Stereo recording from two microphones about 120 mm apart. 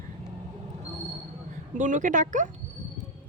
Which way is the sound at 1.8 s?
90° right.